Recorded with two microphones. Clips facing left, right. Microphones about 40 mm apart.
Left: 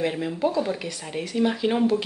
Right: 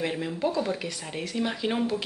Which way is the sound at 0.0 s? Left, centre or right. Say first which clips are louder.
Left 4 dB; centre.